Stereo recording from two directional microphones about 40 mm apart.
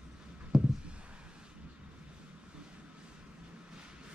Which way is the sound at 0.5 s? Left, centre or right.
Centre.